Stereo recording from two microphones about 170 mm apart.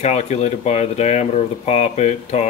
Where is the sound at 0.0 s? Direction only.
40° left (ahead or behind).